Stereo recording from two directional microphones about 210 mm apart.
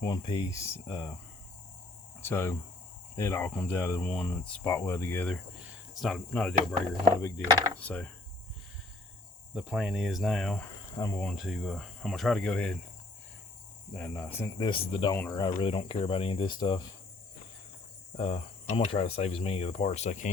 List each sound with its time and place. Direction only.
0.0 s speech: 20° left (ahead or behind)
2.2 s speech: 10° left (ahead or behind)
9.6 s speech: 5° right (ahead or behind)
10.9 s speech: 15° left (ahead or behind)
13.9 s speech: 10° left (ahead or behind)
18.2 s speech: 30° left (ahead or behind)